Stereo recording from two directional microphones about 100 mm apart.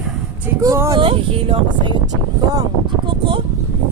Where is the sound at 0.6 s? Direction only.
35° right (ahead or behind).